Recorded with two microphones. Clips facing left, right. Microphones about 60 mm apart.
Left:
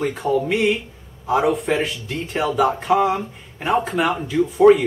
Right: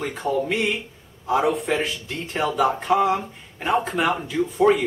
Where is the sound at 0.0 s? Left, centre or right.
Centre.